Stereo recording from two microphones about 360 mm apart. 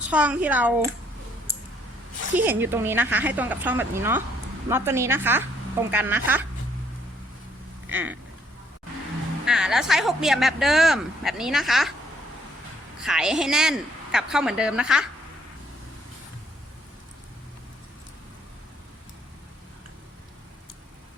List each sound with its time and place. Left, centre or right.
0.1 s speech: centre
2.3 s a woman's voice: centre
7.9 s speech: centre
9.5 s speech: centre
13.0 s speech: centre